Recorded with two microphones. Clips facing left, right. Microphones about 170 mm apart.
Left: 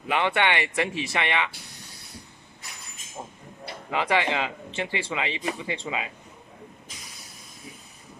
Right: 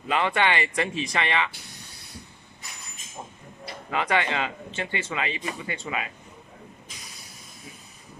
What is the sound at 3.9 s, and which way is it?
Speech, 15° left (ahead or behind).